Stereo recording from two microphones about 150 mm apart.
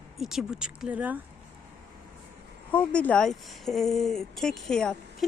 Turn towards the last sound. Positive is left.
turn(degrees=5)  # may be behind; listen again after turning